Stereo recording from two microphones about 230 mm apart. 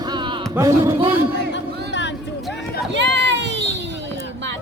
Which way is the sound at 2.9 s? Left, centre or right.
Right.